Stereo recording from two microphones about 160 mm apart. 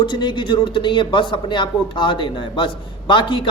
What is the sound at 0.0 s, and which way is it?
Speech, 30° left (ahead or behind).